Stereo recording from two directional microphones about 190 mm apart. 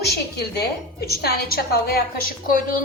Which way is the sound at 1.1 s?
55° left (ahead or behind).